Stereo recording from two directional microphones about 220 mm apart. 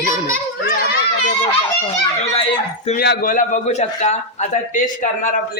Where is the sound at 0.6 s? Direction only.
45° left (ahead or behind).